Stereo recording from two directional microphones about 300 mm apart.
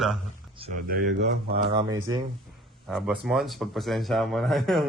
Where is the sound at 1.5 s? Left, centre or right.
Centre.